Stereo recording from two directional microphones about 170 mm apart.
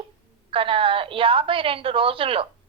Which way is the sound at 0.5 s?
30° right (ahead or behind).